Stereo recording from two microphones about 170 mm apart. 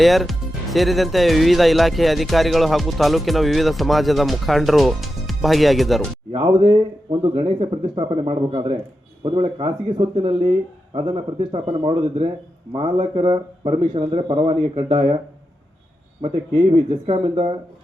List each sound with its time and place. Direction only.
0.0 s speech: centre (ahead or behind)
6.3 s speech: 30° right (ahead or behind)
16.3 s speech: 35° right (ahead or behind)